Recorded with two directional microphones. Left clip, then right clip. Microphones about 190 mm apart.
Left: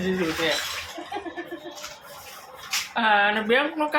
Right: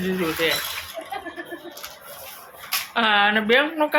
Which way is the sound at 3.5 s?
25° right (ahead or behind).